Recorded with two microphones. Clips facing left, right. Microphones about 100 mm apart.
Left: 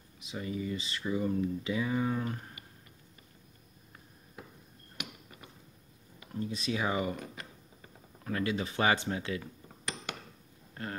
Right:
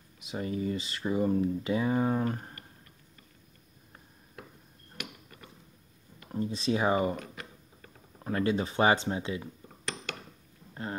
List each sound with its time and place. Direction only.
0.3 s speech: 40° right (ahead or behind)
6.3 s speech: 30° right (ahead or behind)
8.2 s speech: 30° right (ahead or behind)
10.7 s rain: 20° right (ahead or behind)